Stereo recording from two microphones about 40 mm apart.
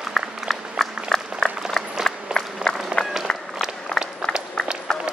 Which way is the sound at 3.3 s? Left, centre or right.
Left.